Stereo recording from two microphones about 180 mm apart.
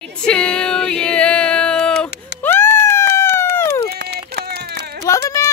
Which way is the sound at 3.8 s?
65° right (ahead or behind).